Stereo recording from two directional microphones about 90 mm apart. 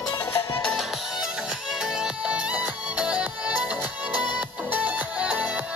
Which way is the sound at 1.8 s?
10° right (ahead or behind).